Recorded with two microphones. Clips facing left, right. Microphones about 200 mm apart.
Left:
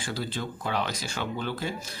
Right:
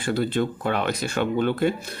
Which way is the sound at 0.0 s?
60° right (ahead or behind).